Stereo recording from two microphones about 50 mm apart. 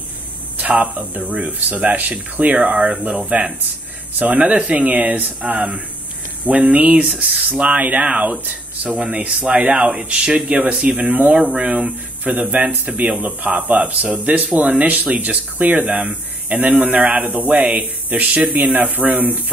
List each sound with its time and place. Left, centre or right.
0.9 s speech: right
7.0 s speech: centre
11.3 s speech: centre
11.6 s speech: right
12.4 s speech: right